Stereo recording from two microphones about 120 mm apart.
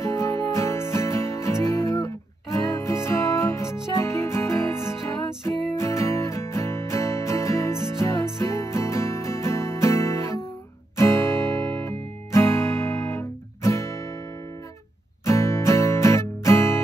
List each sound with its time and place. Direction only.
0.0 s music: 25° left (ahead or behind)
15.2 s music: 25° left (ahead or behind)